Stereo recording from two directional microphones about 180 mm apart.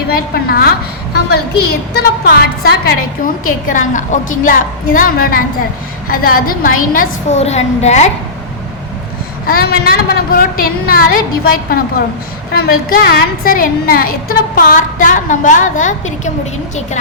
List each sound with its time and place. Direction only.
0.1 s a woman's voice: 55° left (ahead or behind)
3.4 s a woman's voice: 45° left (ahead or behind)
9.5 s a woman's voice: 60° left (ahead or behind); by 16.3 s 40° left (ahead or behind)